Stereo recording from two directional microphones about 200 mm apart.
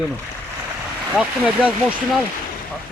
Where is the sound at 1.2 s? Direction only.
5° right (ahead or behind).